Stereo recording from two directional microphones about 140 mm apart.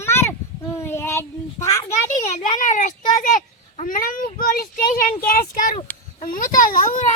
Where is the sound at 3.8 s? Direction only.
80° left.